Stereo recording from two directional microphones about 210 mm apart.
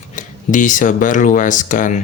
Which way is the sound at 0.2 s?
35° left (ahead or behind).